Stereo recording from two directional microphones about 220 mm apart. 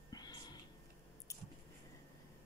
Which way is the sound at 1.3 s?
15° left (ahead or behind).